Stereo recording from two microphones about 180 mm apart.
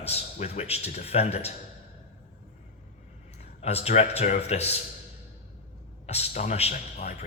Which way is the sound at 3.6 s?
35° left (ahead or behind).